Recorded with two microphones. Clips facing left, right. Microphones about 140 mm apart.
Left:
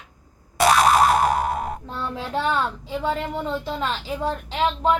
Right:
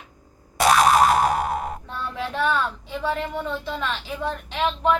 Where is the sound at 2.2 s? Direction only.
30° left (ahead or behind).